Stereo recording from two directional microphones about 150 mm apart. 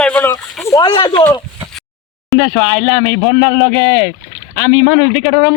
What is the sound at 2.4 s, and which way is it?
Speech, 35° right (ahead or behind).